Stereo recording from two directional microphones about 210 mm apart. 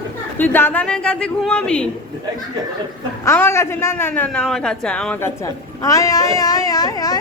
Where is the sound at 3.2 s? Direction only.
10° left (ahead or behind).